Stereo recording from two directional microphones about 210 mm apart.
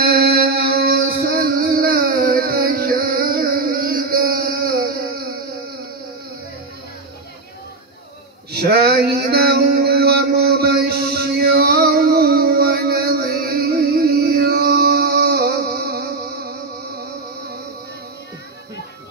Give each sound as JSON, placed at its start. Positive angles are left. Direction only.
{"t": 0.0, "sound": "music", "side_deg": -45}
{"t": 8.5, "sound": "mantra", "side_deg": -50}